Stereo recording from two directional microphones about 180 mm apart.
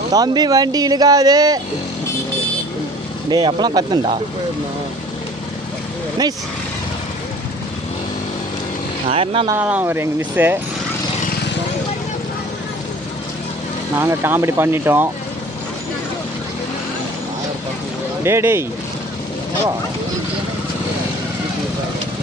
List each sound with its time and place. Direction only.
0.1 s speech: 20° right (ahead or behind)
3.3 s speech: 25° right (ahead or behind)
9.1 s speech: 30° right (ahead or behind)
9.5 s speech: 10° right (ahead or behind)
13.9 s speech: 15° right (ahead or behind)
18.2 s speech: 15° right (ahead or behind)